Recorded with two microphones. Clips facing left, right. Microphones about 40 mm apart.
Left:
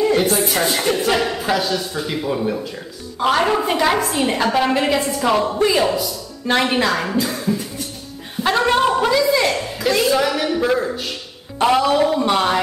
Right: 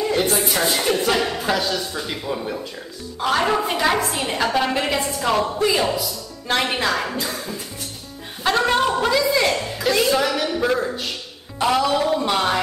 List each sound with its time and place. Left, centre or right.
0.0 s a woman's voice: centre
8.4 s a sound: centre
11.6 s a man's voice: centre